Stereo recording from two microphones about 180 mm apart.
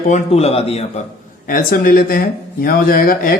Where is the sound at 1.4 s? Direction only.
50° left (ahead or behind).